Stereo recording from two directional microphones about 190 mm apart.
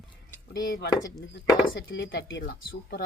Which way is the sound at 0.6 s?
50° left (ahead or behind).